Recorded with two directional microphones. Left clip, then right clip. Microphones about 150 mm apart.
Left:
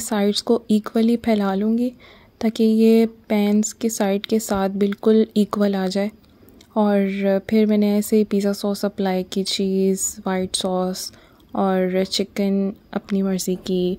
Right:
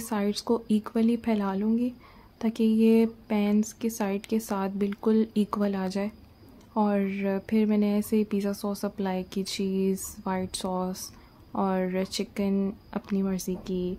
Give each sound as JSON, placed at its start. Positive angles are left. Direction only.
{"t": 0.0, "sound": "speech", "side_deg": 40}